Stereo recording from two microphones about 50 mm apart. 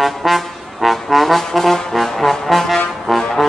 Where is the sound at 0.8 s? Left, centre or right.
Centre.